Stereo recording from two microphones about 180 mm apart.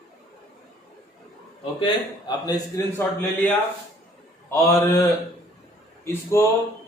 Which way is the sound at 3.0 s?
10° left (ahead or behind).